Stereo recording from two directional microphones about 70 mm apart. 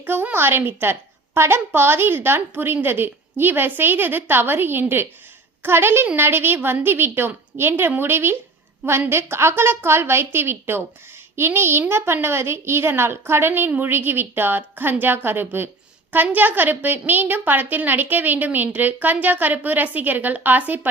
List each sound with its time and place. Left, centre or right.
0.0 s a woman's voice: right